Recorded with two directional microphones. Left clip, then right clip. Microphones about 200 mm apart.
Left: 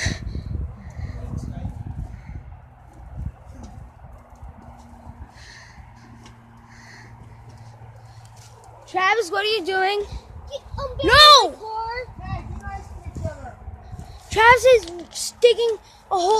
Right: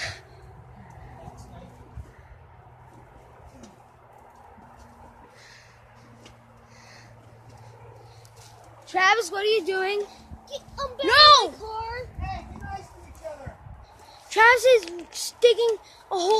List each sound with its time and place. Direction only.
8.8 s a woman's voice: 5° right (ahead or behind)
9.3 s speech: 35° left (ahead or behind)
10.5 s a sound: 35° right (ahead or behind)
11.1 s speech: 30° left (ahead or behind)
11.7 s a sound: 25° right (ahead or behind)
14.3 s speech: 10° left (ahead or behind)